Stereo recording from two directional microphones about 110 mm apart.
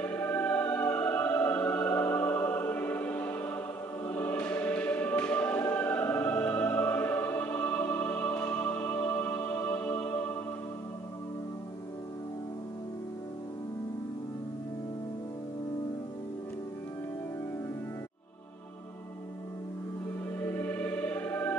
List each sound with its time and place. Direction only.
0.0 s music: 15° left (ahead or behind)
4.1 s choir: 15° left (ahead or behind)
20.3 s music: 20° left (ahead or behind)